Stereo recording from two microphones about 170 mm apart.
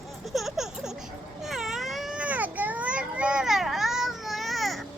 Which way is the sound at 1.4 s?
Centre (ahead or behind).